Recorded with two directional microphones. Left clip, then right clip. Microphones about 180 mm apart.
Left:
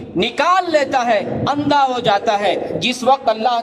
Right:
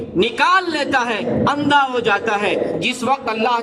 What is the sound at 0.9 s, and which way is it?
A man's voice, 20° left (ahead or behind).